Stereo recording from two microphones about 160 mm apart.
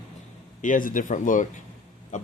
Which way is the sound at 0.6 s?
55° left (ahead or behind).